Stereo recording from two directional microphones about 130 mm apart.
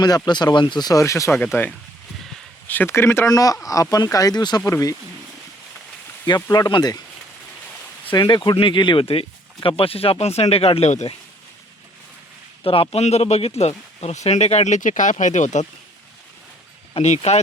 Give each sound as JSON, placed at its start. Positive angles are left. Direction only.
{"t": 0.0, "sound": "speech", "side_deg": 35}
{"t": 6.2, "sound": "speech", "side_deg": 35}
{"t": 8.1, "sound": "speech", "side_deg": 35}
{"t": 12.6, "sound": "speech", "side_deg": 45}
{"t": 16.9, "sound": "speech", "side_deg": 60}